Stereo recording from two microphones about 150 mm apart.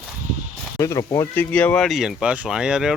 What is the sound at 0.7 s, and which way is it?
Speech, 20° left (ahead or behind).